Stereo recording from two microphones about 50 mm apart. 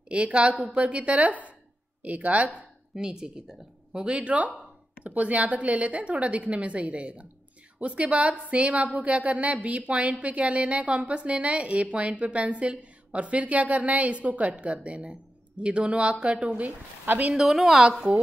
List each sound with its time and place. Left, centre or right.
0.1 s speech: right
2.9 s a woman's voice: centre
17.0 s speech: right
17.3 s a woman's voice: centre